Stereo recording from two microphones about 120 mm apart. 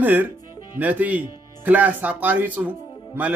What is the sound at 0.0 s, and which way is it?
Speech, 15° right (ahead or behind).